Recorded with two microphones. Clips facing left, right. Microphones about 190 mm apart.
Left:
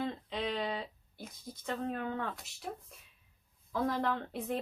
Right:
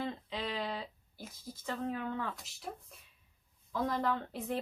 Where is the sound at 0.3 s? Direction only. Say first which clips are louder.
Left 3 dB; 50° left (ahead or behind).